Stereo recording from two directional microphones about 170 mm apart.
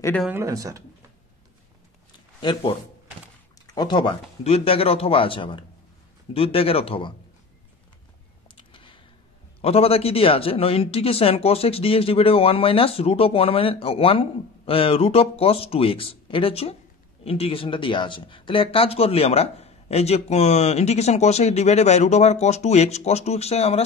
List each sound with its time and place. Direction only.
0.3 s speech: 15° right (ahead or behind)
3.6 s speech: 25° left (ahead or behind)
8.5 s a sound: 30° left (ahead or behind)
9.6 s speech: 35° left (ahead or behind)